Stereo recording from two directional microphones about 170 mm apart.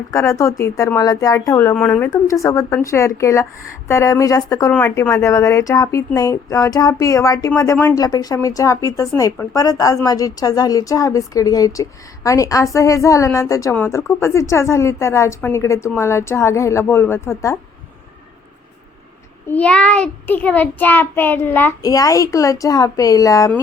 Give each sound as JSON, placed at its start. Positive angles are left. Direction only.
{"t": 0.1, "sound": "a woman's voice", "side_deg": 15}
{"t": 19.5, "sound": "a child's voice", "side_deg": 10}